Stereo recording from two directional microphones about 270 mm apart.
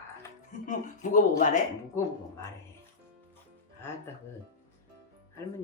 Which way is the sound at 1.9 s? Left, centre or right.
Centre.